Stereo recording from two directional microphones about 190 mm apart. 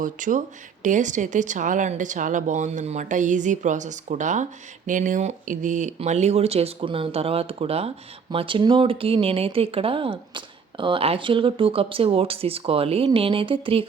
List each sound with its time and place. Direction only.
0.0 s speech: 45° right (ahead or behind)